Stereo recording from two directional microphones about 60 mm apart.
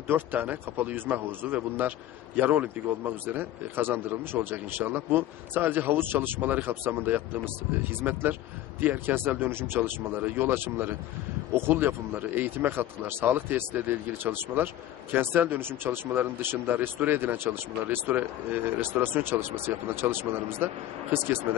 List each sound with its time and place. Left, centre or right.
0.1 s a man's voice: right